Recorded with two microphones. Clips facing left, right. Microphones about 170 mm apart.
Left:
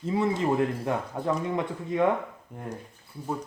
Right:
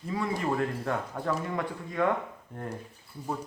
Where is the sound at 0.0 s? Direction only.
25° left (ahead or behind).